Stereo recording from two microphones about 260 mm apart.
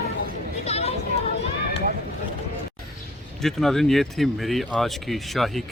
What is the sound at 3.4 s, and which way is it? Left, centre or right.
Speech, centre.